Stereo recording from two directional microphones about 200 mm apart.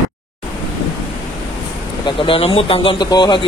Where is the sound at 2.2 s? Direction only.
30° left (ahead or behind).